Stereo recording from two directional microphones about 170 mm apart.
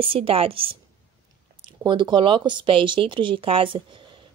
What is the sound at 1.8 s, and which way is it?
Speech, 25° right (ahead or behind).